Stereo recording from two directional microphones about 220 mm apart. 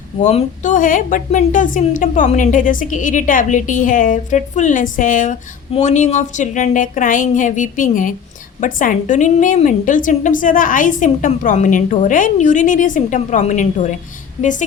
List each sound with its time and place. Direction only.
0.2 s a woman's voice: 30° left (ahead or behind)